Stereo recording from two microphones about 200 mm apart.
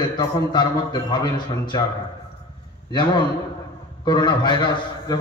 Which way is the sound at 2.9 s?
25° left (ahead or behind).